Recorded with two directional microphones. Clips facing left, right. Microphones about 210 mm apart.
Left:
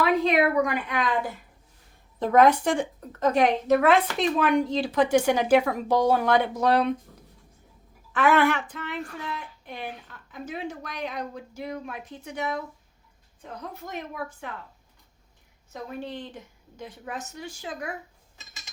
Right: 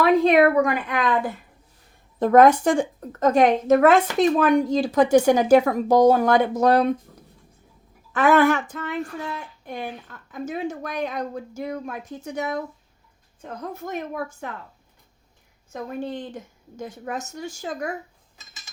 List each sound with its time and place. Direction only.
0.0 s a sound: 45° right (ahead or behind)
2.1 s a woman's voice: 50° right (ahead or behind)
8.1 s a woman's voice: 40° right (ahead or behind)
15.7 s a woman's voice: 50° right (ahead or behind)